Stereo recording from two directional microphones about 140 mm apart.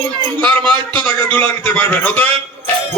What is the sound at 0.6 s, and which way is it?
A man's voice, 10° left (ahead or behind).